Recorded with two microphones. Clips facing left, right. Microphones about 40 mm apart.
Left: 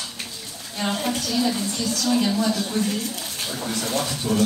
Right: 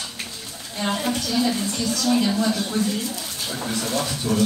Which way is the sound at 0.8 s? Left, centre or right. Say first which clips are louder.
Right 1 dB; centre.